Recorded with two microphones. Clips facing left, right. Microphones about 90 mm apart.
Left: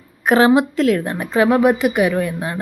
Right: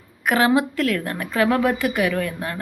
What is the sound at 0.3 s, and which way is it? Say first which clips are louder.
Speech: left 5 dB; 25° left (ahead or behind).